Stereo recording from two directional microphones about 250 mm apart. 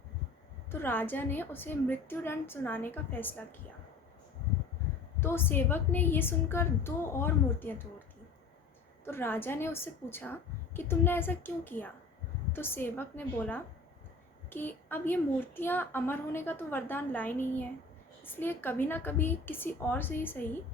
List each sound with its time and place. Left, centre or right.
0.7 s a woman's voice: centre
5.2 s a woman's voice: centre
9.0 s a woman's voice: centre